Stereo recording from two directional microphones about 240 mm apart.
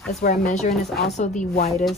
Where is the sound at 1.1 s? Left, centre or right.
Left.